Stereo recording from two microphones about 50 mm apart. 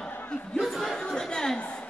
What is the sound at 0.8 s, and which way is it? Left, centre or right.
Speech, centre.